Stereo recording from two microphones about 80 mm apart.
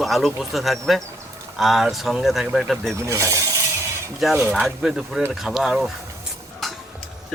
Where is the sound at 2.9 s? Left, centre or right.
Right.